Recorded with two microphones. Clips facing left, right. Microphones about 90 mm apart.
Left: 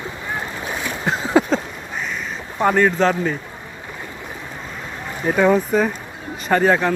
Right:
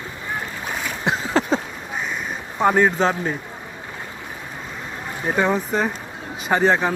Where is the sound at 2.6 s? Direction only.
5° right (ahead or behind).